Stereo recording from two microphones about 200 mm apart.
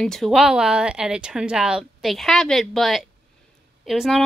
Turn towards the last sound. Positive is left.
turn(degrees=0)  # may be behind; listen again after turning